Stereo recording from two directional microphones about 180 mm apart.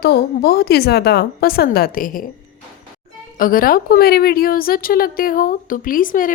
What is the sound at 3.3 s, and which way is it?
A woman's voice, 50° left (ahead or behind).